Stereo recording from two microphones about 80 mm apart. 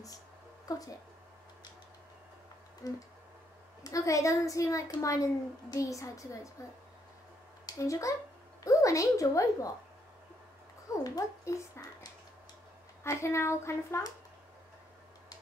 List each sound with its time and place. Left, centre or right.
0.7 s speech: left
2.8 s speech: left
7.6 s a woman's voice: left
11.1 s speech: left
13.0 s speech: left